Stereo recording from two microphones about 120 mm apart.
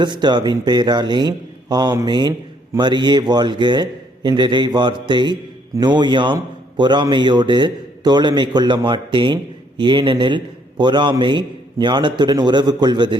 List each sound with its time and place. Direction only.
0.0 s a man's voice: 40° right (ahead or behind)